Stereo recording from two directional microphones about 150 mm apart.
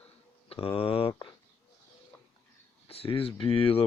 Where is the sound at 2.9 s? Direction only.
40° left (ahead or behind).